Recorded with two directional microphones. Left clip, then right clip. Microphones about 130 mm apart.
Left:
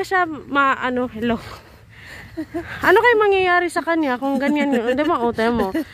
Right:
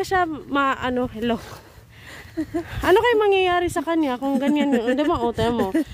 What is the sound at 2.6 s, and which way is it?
Speech, 30° right (ahead or behind).